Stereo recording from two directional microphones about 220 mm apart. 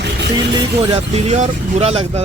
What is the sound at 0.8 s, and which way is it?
Speech, 30° right (ahead or behind).